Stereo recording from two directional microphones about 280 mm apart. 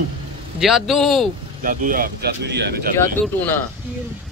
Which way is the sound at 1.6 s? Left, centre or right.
Right.